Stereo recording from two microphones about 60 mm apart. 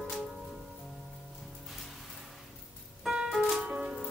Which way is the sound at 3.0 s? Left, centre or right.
Centre.